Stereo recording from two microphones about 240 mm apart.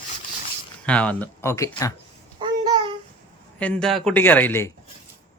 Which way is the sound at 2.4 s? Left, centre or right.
Centre.